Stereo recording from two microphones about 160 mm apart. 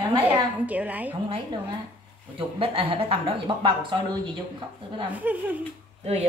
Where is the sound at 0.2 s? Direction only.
10° right (ahead or behind).